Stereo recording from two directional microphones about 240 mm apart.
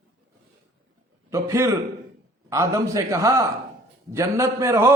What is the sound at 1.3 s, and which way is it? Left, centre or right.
A man's voice, centre.